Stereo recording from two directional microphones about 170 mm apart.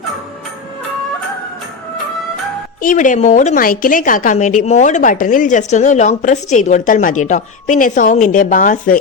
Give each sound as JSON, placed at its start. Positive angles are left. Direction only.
{"t": 2.8, "sound": "speech", "side_deg": 50}